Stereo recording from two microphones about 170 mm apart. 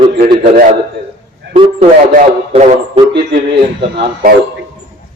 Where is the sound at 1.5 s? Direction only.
35° right (ahead or behind).